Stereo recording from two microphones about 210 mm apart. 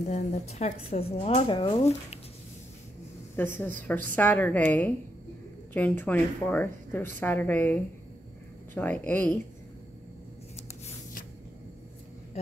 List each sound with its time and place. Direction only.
0.1 s speech: 30° left (ahead or behind)
3.4 s a woman's voice: 10° left (ahead or behind)